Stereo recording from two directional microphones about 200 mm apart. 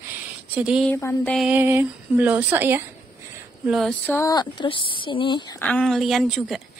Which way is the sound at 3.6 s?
Centre (ahead or behind).